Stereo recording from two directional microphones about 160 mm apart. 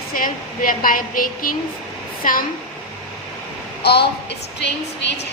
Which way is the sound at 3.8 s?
90° left.